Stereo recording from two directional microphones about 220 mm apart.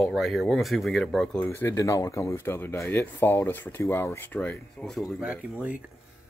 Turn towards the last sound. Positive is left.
turn(degrees=-5)  # may be behind; listen again after turning